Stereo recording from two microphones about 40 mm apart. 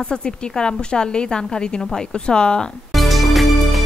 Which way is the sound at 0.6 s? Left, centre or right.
Left.